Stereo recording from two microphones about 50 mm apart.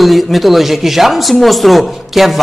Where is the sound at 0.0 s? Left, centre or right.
Centre.